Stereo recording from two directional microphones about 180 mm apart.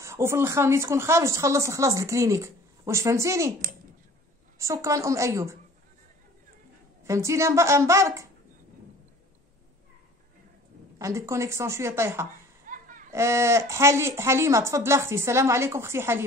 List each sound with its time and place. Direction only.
0.0 s speech: 15° right (ahead or behind)
4.6 s speech: 15° right (ahead or behind)
7.1 s speech: 15° right (ahead or behind)
11.0 s speech: 15° right (ahead or behind)
12.6 s a sound: 50° right (ahead or behind)
13.1 s speech: 15° right (ahead or behind)